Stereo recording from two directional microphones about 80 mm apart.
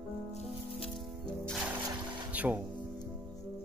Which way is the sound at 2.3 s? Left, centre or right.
Centre.